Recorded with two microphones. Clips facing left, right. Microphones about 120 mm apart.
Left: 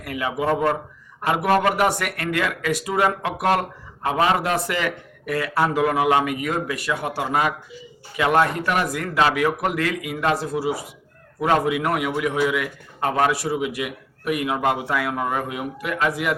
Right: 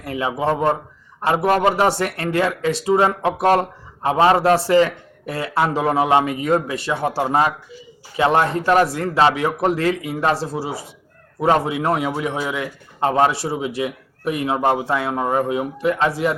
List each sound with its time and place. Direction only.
0.0 s speech: 25° right (ahead or behind)